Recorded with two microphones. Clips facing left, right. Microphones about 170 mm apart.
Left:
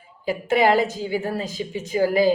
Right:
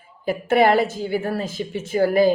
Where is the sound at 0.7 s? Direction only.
15° left (ahead or behind).